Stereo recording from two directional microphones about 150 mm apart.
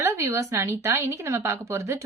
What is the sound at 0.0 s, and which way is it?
A woman's voice, 20° right (ahead or behind).